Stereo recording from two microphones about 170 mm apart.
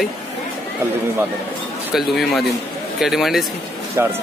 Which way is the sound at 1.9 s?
Centre (ahead or behind).